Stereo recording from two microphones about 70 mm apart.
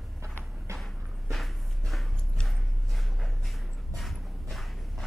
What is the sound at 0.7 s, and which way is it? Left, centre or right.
Walk, right.